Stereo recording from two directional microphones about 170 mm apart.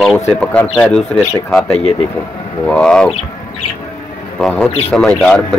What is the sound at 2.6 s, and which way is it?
Speech, 5° left (ahead or behind).